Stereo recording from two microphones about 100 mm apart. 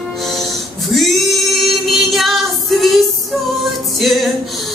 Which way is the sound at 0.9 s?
Centre (ahead or behind).